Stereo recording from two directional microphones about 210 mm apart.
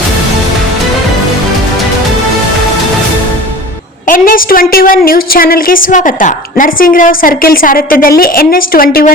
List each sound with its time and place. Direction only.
4.0 s a woman's voice: 40° left (ahead or behind)